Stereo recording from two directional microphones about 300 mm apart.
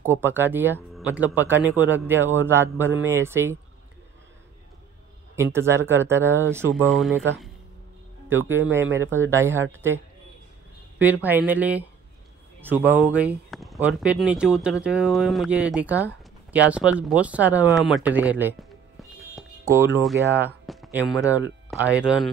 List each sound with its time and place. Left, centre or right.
0.0 s speech: centre
5.3 s speech: centre
8.3 s speech: centre
11.2 s speech: centre
17.7 s music: centre
20.4 s a sound: centre
22.0 s speech: centre